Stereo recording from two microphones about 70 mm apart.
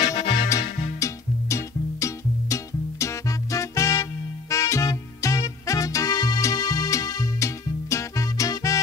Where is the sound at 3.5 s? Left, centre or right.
Left.